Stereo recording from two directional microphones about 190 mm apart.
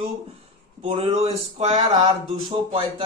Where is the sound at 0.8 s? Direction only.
35° right (ahead or behind).